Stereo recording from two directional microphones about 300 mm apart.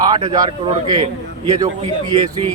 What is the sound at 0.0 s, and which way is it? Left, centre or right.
A man's voice, centre.